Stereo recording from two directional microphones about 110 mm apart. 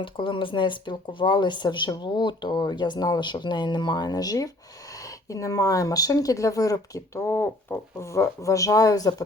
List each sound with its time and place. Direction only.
0.0 s speech: 50° left (ahead or behind); by 9.2 s 35° left (ahead or behind)